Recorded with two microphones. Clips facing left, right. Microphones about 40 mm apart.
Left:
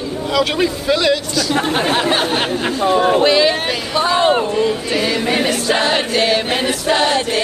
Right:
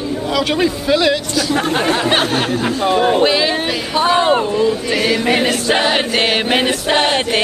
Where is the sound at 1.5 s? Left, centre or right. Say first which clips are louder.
Even; left.